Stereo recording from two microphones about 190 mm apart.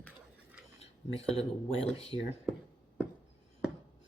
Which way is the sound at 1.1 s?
30° left (ahead or behind).